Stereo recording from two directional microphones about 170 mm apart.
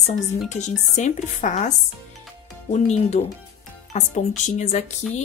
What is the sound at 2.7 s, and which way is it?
Speech, 40° left (ahead or behind).